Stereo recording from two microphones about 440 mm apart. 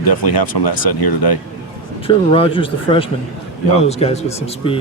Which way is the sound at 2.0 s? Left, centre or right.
Centre.